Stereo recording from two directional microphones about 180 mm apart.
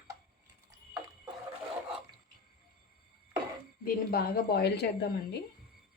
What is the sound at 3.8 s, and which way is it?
A woman's voice, 60° left (ahead or behind).